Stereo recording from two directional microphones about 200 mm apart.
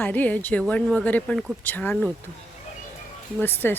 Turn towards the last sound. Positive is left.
turn(degrees=10)  # may be behind; listen again after turning